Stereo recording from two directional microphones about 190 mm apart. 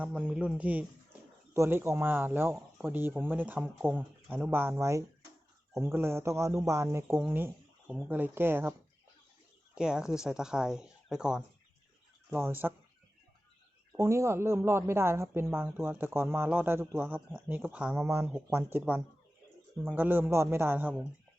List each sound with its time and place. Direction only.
0.0 s speech: 5° right (ahead or behind)
9.7 s speech: 5° right (ahead or behind)
13.9 s speech: 15° right (ahead or behind)